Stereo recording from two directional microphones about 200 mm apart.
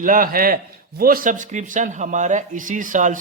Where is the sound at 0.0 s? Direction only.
45° right (ahead or behind).